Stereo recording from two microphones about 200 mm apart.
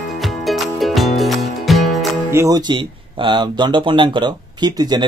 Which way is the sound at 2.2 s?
15° right (ahead or behind).